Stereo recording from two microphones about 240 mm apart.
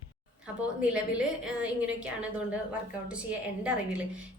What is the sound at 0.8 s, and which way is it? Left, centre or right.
A woman's voice, centre.